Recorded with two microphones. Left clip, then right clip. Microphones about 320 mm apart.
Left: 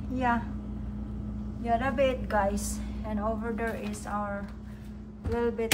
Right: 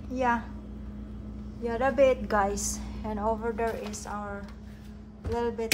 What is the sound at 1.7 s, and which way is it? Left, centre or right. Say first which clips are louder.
A woman's voice: right 3 dB; centre.